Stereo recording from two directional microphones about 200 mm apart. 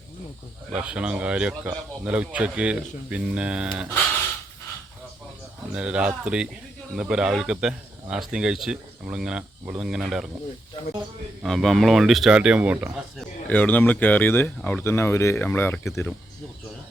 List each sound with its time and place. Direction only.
0.7 s speech: 5° right (ahead or behind)
5.7 s speech: 5° right (ahead or behind)
10.8 s speech: 20° left (ahead or behind)
11.4 s speech: centre (ahead or behind)
13.5 s speech: 10° left (ahead or behind)